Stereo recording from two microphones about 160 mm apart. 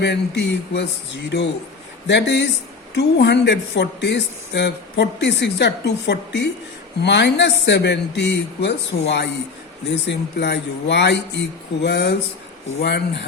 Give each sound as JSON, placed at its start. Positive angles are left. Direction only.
{"t": 0.0, "sound": "speech", "side_deg": 90}